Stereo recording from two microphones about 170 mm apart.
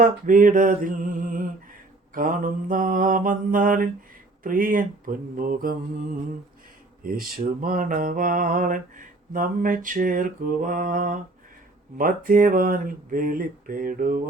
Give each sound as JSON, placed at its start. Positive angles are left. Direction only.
{"t": 0.0, "sound": "mantra", "side_deg": -50}
{"t": 7.0, "sound": "mantra", "side_deg": -55}
{"t": 11.9, "sound": "speech", "side_deg": -55}